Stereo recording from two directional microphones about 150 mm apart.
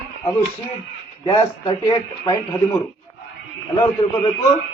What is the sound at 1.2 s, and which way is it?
Speech, 25° left (ahead or behind).